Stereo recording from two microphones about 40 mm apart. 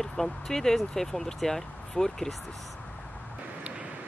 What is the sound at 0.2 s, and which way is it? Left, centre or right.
Speech, centre.